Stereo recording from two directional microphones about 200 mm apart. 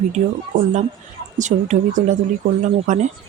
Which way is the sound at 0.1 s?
35° right (ahead or behind).